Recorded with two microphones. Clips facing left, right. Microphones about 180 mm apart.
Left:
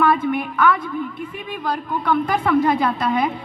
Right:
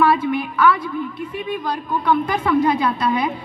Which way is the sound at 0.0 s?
50° left (ahead or behind).